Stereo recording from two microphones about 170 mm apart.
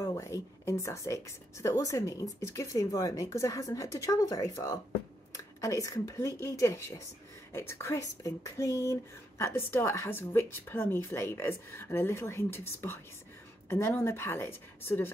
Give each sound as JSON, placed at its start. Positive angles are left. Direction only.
{"t": 0.0, "sound": "a woman's voice", "side_deg": 20}